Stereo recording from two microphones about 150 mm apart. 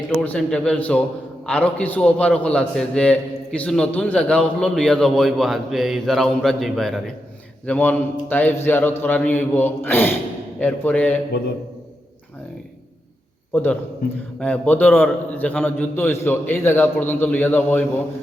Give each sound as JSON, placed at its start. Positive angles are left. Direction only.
{"t": 0.2, "sound": "a man's voice", "side_deg": 5}
{"t": 13.5, "sound": "a man's voice", "side_deg": 15}
{"t": 14.0, "sound": "a man's voice", "side_deg": 90}
{"t": 14.3, "sound": "a man's voice", "side_deg": 10}